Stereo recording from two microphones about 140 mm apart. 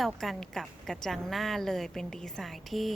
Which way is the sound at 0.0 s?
Centre (ahead or behind).